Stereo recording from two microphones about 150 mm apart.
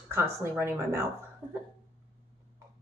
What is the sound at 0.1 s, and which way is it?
Speech, 15° right (ahead or behind).